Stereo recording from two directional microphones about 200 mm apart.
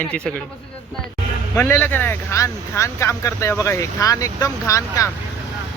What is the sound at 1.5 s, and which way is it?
Speech, 10° left (ahead or behind).